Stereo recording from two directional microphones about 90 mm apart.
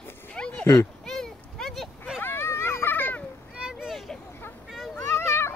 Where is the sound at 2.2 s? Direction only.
25° left (ahead or behind).